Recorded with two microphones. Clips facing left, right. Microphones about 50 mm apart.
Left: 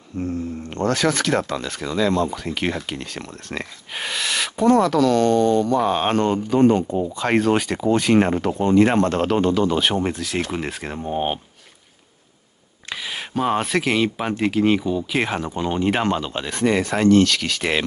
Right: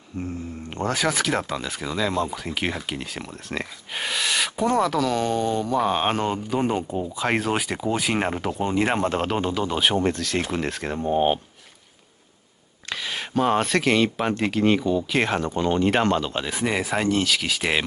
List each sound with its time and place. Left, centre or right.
0.2 s speech: centre
12.9 s speech: centre